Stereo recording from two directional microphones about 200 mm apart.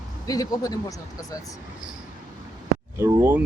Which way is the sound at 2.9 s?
10° right (ahead or behind).